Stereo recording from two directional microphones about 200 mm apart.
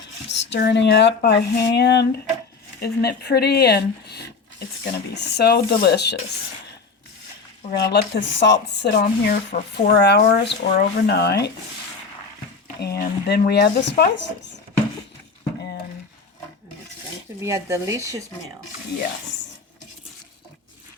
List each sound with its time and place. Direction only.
0.3 s a woman's voice: 60° left (ahead or behind)
7.8 s speech: 60° left (ahead or behind)
12.8 s speech: 55° left (ahead or behind)
17.4 s speech: 15° right (ahead or behind)